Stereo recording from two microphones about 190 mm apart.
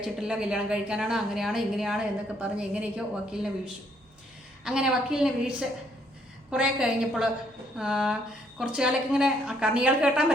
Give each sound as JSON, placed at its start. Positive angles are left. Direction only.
{"t": 0.0, "sound": "speech", "side_deg": -5}
{"t": 4.6, "sound": "speech", "side_deg": -5}